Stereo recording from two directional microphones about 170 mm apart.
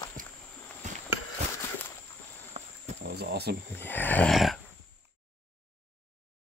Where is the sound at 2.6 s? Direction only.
40° right (ahead or behind).